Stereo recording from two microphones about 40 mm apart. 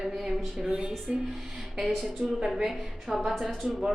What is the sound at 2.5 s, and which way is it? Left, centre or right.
Speech, centre.